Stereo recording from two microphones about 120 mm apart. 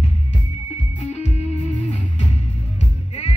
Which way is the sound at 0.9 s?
65° left (ahead or behind).